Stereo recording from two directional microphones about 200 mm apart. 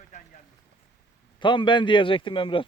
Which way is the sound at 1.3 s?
25° left (ahead or behind).